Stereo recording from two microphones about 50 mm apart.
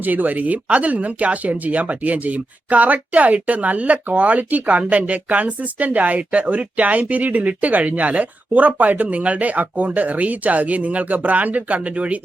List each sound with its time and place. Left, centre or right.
0.0 s speech: right